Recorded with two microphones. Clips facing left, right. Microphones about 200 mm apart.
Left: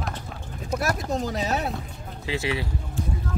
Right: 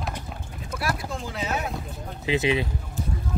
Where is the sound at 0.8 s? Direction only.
45° left (ahead or behind).